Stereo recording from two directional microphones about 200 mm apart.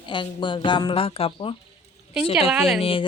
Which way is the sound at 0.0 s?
25° left (ahead or behind).